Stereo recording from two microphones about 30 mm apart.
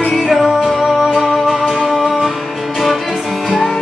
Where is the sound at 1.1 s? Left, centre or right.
Right.